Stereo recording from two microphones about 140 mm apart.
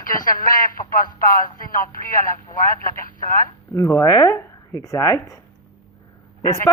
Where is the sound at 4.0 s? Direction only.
25° left (ahead or behind).